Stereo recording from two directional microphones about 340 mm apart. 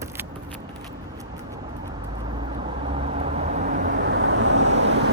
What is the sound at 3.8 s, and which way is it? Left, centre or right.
Vehicle, right.